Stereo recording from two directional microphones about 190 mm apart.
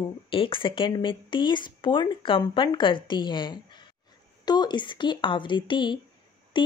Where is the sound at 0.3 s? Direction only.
25° left (ahead or behind).